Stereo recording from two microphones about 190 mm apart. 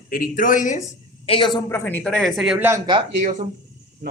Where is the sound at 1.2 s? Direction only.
30° left (ahead or behind); by 2.8 s 5° right (ahead or behind).